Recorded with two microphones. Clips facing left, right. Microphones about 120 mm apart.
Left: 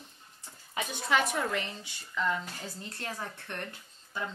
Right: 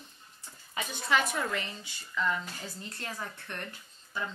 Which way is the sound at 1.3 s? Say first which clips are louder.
Left 1 dB; 30° left (ahead or behind).